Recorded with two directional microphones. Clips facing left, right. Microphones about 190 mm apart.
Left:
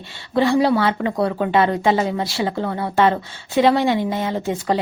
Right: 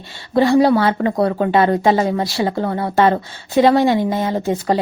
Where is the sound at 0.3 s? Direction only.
40° right (ahead or behind).